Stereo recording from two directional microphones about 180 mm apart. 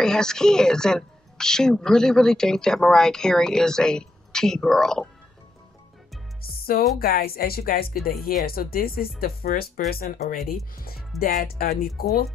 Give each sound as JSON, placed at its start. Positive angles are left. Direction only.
{"t": 0.0, "sound": "speech", "side_deg": 5}
{"t": 6.4, "sound": "music", "side_deg": 55}
{"t": 7.0, "sound": "speech", "side_deg": 55}